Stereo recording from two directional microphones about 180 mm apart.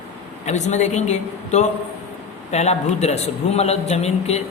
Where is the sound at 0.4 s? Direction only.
40° left (ahead or behind).